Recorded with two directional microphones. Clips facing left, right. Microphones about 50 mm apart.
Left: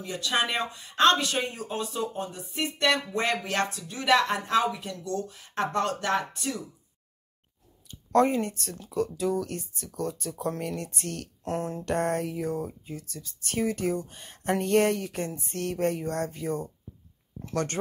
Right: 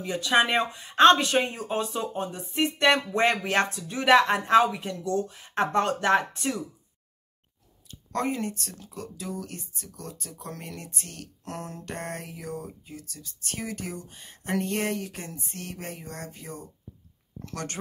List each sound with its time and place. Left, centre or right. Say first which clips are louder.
0.0 s speech: right 5 dB; right
8.1 s speech: left 6 dB; left
11.4 s speech: left 7 dB; left